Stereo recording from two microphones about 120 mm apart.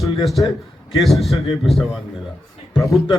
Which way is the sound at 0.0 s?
Centre (ahead or behind).